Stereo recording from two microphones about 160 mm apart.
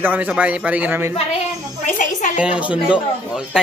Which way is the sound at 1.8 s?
50° left (ahead or behind).